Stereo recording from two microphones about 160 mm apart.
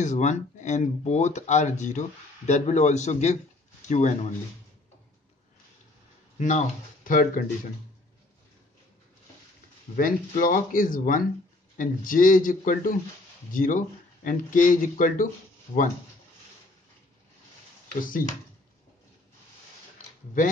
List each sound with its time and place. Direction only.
0.0 s speech: 50° left (ahead or behind)
6.3 s speech: 50° left (ahead or behind)
9.9 s speech: 60° left (ahead or behind)